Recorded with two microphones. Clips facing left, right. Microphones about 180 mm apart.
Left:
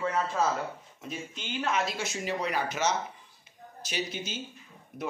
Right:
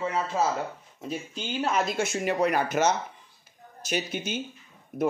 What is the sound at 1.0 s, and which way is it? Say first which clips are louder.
Speech: right 5 dB; 35° right (ahead or behind).